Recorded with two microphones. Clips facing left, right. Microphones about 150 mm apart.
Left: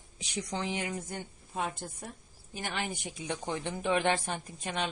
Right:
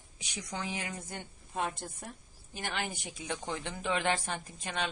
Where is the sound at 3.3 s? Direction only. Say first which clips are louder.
Left 3 dB; 20° left (ahead or behind).